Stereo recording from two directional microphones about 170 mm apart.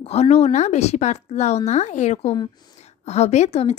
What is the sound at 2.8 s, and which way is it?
Speech, 40° left (ahead or behind).